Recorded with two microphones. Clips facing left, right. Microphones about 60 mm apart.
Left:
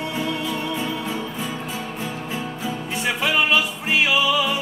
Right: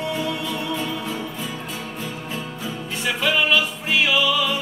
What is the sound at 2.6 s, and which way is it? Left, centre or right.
Music, left.